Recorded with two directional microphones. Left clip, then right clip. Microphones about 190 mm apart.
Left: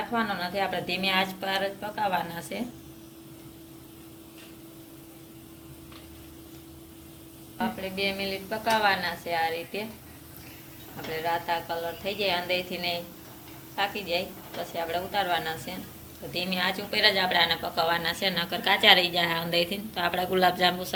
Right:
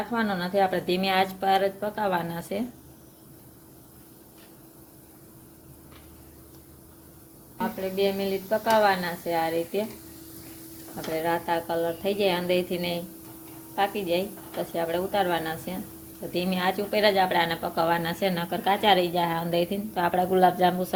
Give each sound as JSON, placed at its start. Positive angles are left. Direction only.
{"t": 0.1, "sound": "a woman's voice", "side_deg": -55}
{"t": 7.8, "sound": "speech", "side_deg": -50}
{"t": 11.1, "sound": "a woman's voice", "side_deg": -55}